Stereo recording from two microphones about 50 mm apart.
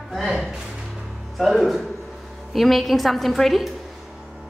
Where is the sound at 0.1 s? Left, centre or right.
Centre.